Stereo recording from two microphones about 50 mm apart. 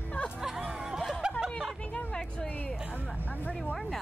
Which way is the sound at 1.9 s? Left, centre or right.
Centre.